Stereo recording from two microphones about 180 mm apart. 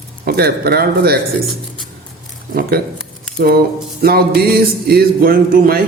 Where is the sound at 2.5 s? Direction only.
60° right (ahead or behind).